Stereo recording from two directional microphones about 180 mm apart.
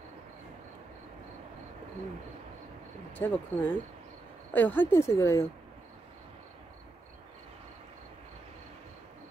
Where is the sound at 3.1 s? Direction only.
10° left (ahead or behind).